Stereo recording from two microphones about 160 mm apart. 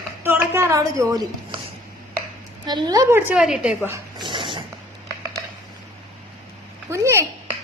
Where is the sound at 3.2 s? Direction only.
5° right (ahead or behind).